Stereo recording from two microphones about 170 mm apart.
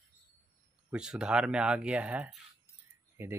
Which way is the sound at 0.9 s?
5° right (ahead or behind).